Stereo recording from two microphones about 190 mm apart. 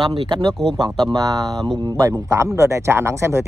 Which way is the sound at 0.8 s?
20° right (ahead or behind).